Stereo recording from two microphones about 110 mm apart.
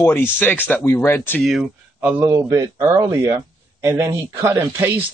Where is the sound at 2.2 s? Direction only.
30° right (ahead or behind).